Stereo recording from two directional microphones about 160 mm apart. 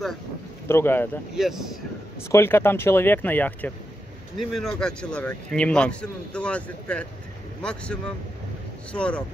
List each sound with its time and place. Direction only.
0.7 s a man's voice: 15° left (ahead or behind)
1.3 s speech: 5° right (ahead or behind)
2.3 s a man's voice: 15° left (ahead or behind)